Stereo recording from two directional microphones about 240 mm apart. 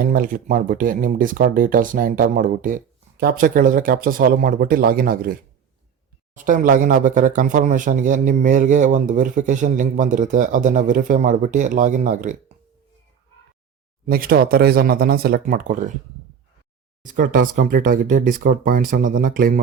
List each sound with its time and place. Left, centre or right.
0.0 s speech: right
14.1 s speech: right
17.0 s speech: right